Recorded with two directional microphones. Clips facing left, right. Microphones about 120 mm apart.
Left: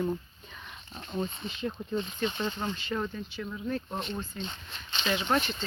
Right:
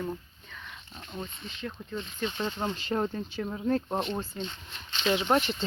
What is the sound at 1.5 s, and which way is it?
Speech, 20° left (ahead or behind).